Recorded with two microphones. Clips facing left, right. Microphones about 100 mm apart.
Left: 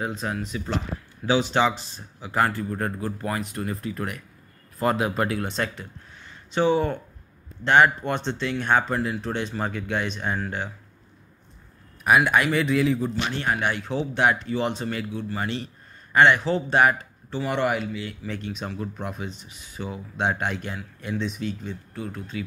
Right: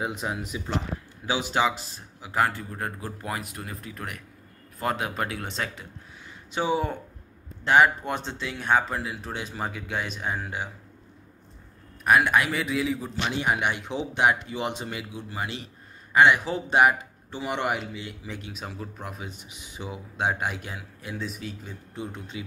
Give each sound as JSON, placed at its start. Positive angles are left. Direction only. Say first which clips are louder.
{"t": 0.0, "sound": "a man's voice", "louder": "left 1 dB", "side_deg": -15}
{"t": 12.0, "sound": "a man's voice", "louder": "left 1 dB", "side_deg": 5}
{"t": 21.9, "sound": "speech", "louder": "even", "side_deg": -20}